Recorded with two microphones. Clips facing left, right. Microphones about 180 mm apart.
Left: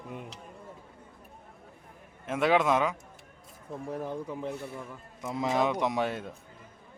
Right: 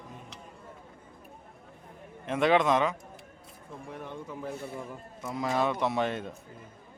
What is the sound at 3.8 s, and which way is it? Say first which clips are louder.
Speech: left 6 dB; 35° left (ahead or behind).